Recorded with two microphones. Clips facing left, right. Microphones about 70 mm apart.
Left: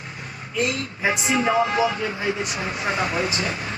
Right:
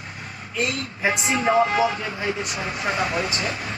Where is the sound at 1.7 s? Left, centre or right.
Left.